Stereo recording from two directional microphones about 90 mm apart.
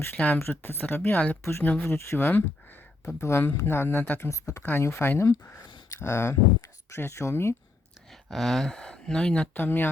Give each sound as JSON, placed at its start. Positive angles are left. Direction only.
{"t": 0.3, "sound": "speech", "side_deg": 25}
{"t": 4.3, "sound": "speech", "side_deg": 35}
{"t": 8.3, "sound": "speech", "side_deg": 5}
{"t": 9.6, "sound": "speech", "side_deg": 20}